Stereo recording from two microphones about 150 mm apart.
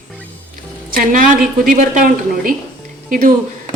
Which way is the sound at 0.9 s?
70° right (ahead or behind).